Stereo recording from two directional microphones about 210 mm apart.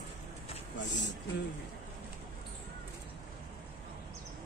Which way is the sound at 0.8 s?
60° left (ahead or behind).